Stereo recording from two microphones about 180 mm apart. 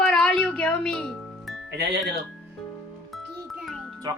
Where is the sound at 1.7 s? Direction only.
70° right (ahead or behind).